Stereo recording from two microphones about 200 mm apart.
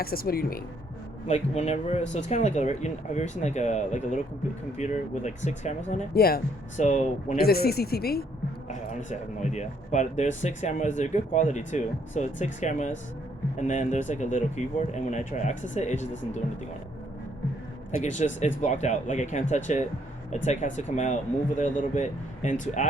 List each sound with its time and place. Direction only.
0.0 s speech: 50° left (ahead or behind)
1.3 s speech: 35° left (ahead or behind)
5.9 s speech: 50° left (ahead or behind)
9.0 s speech: 35° left (ahead or behind)
18.3 s speech: 35° left (ahead or behind)